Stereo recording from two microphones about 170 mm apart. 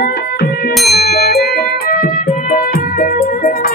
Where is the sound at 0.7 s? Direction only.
Centre (ahead or behind).